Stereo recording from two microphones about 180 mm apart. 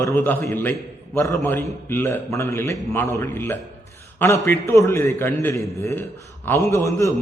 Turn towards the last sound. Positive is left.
turn(degrees=15)  # may be behind; listen again after turning